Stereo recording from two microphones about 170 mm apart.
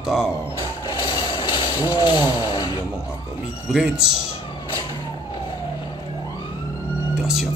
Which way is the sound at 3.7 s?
5° right (ahead or behind).